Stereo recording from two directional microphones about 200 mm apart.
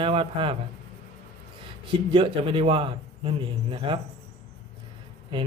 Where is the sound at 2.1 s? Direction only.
25° right (ahead or behind).